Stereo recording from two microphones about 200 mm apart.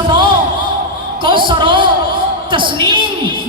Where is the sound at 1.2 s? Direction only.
25° right (ahead or behind).